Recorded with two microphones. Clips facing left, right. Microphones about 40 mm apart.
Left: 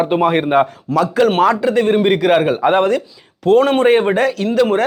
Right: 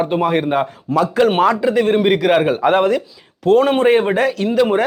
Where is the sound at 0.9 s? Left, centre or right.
Centre.